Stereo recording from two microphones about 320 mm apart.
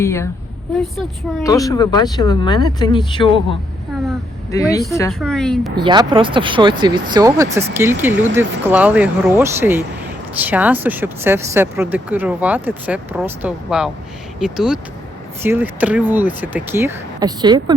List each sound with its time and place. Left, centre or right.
0.0 s speech: centre
1.5 s speech: centre
5.7 s speech: centre